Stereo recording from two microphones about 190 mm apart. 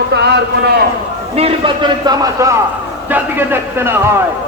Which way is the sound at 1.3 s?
30° right (ahead or behind).